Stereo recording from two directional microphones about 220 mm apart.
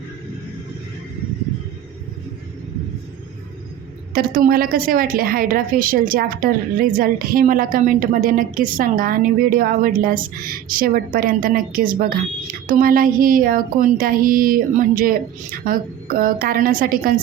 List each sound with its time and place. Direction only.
4.1 s a woman's voice: 40° right (ahead or behind)